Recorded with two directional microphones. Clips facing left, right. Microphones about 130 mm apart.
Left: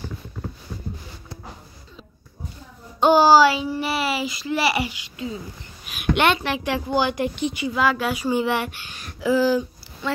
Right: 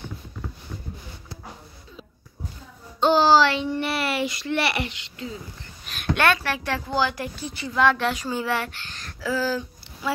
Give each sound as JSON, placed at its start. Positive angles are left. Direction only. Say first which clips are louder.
{"t": 3.0, "sound": "a child's voice", "louder": "left 3 dB", "side_deg": 10}
{"t": 10.0, "sound": "speech", "louder": "left 1 dB", "side_deg": -5}